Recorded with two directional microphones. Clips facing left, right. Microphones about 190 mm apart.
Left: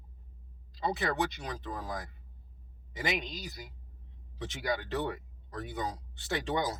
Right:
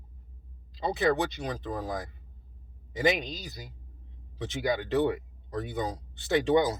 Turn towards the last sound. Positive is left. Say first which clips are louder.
# right 8 dB
turn(degrees=-20)  # may be behind; listen again after turning